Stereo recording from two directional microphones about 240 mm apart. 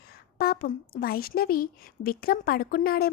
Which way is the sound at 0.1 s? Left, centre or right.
Left.